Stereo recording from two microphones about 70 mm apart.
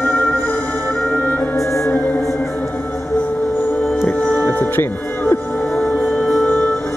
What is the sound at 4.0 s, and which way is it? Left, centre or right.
Music, left.